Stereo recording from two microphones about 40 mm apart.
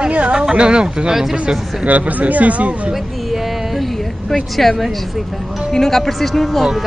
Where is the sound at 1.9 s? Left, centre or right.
Right.